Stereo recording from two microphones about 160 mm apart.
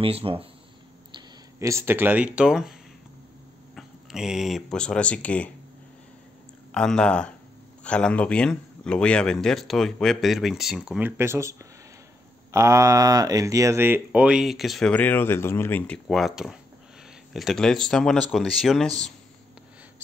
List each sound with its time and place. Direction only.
0.0 s speech: 35° right (ahead or behind)
1.1 s speech: 20° right (ahead or behind)
3.7 s speech: 5° right (ahead or behind)
6.7 s speech: 5° left (ahead or behind)
16.1 s speech: centre (ahead or behind)